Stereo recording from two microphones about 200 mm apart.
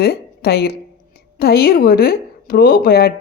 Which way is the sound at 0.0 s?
50° left (ahead or behind).